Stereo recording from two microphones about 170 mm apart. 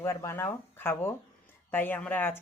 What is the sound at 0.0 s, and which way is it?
Speech, 15° left (ahead or behind).